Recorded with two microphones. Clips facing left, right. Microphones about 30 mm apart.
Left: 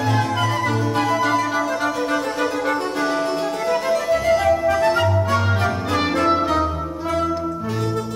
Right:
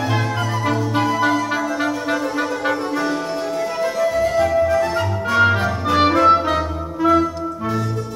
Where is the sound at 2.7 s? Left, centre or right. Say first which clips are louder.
Even; centre.